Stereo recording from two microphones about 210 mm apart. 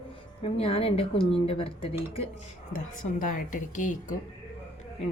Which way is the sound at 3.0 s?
40° left (ahead or behind).